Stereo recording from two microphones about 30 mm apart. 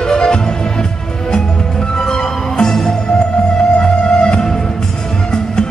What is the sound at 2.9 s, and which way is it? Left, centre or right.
Music, left.